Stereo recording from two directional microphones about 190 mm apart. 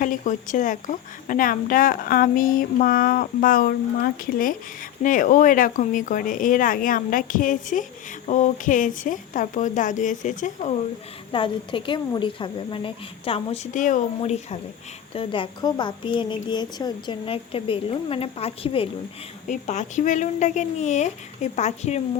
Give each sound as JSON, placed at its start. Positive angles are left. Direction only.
{"t": 0.0, "sound": "a woman's voice", "side_deg": 45}
{"t": 11.3, "sound": "a woman's voice", "side_deg": 25}